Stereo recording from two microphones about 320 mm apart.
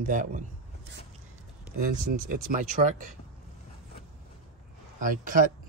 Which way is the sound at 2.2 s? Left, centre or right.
Right.